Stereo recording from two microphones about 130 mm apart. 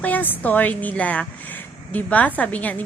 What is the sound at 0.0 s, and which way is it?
A woman's voice, 15° left (ahead or behind).